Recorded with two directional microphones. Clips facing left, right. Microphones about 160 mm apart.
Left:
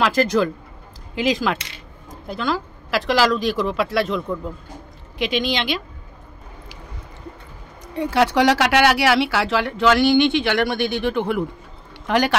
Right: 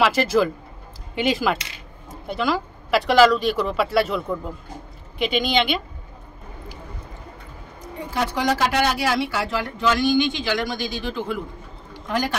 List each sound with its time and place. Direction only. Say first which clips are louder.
0.0 s speech: even; 5° right (ahead or behind)
5.2 s speech: right 1 dB; centre (ahead or behind)
7.8 s a man's voice: left 7 dB; 75° left (ahead or behind)